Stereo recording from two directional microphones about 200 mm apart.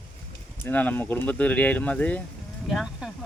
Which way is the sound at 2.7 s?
Centre (ahead or behind).